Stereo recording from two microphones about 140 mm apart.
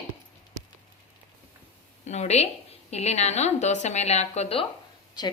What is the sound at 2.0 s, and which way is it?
A woman's voice, 55° left (ahead or behind).